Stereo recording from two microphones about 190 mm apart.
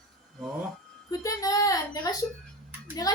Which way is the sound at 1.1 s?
15° left (ahead or behind).